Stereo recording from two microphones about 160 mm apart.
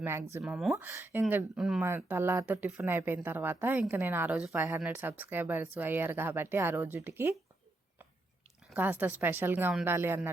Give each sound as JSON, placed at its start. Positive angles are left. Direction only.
{"t": 0.0, "sound": "speech", "side_deg": -15}
{"t": 0.3, "sound": "speech", "side_deg": -5}
{"t": 8.7, "sound": "speech", "side_deg": -10}